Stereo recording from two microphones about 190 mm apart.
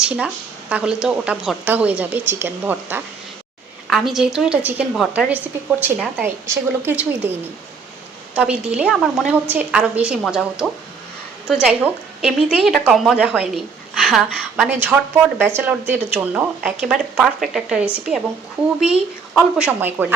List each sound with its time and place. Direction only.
0.0 s a woman's voice: 5° right (ahead or behind)
8.4 s a woman's voice: 5° right (ahead or behind)